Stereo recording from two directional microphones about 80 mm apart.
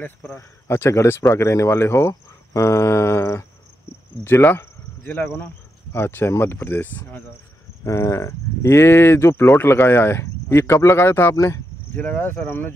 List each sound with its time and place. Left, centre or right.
0.0 s speech: left
7.8 s speech: left
11.3 s speech: left
11.9 s speech: centre